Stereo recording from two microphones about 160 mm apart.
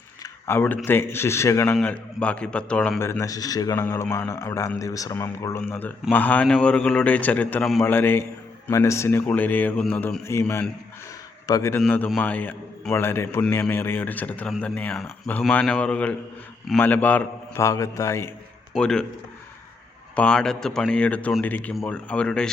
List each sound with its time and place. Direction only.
0.2 s a sound: 15° left (ahead or behind)
0.9 s a man's voice: 15° left (ahead or behind)
1.7 s a man's voice: 5° left (ahead or behind)
7.9 s a man's voice: 15° left (ahead or behind)
11.4 s a man's voice: 20° left (ahead or behind)
11.9 s a man's voice: 10° left (ahead or behind)
18.7 s a man's voice: 5° left (ahead or behind)
20.1 s a man's voice: 5° left (ahead or behind)